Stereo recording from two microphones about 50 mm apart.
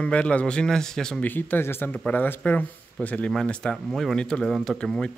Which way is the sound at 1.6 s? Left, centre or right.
Left.